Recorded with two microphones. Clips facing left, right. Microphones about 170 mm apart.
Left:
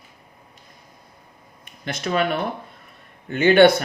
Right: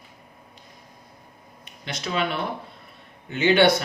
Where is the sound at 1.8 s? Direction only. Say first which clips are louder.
Left 4 dB; 50° left (ahead or behind).